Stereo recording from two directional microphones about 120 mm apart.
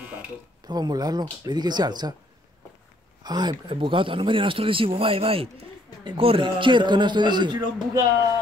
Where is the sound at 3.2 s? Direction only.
35° right (ahead or behind).